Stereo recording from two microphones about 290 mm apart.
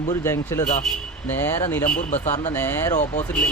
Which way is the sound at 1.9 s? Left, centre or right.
Left.